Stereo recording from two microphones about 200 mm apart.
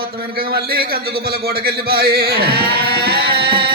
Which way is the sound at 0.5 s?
50° right (ahead or behind).